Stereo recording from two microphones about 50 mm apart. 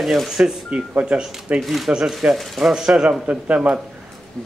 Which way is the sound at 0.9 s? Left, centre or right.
Right.